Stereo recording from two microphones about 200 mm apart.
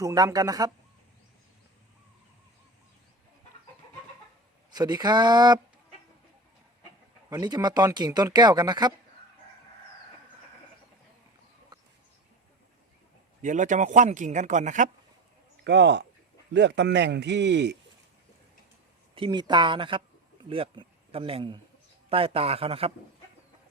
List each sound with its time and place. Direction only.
0.0 s speech: 15° right (ahead or behind)
4.7 s speech: 20° right (ahead or behind)
7.3 s speech: 20° right (ahead or behind)
13.4 s a man's voice: 40° right (ahead or behind)
15.6 s a man's voice: 60° right (ahead or behind)
19.1 s a man's voice: 25° right (ahead or behind)